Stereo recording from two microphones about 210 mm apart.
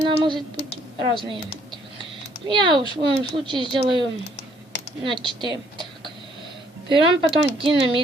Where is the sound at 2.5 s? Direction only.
20° right (ahead or behind).